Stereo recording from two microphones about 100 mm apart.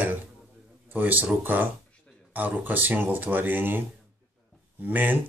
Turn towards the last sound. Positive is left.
turn(degrees=-15)  # may be behind; listen again after turning